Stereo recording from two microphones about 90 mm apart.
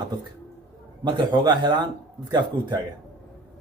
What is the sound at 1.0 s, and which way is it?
Speech, 55° right (ahead or behind).